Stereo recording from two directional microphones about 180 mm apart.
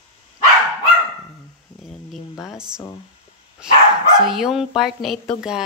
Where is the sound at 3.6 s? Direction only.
5° right (ahead or behind).